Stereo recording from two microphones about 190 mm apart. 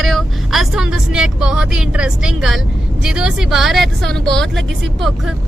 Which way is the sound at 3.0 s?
5° right (ahead or behind).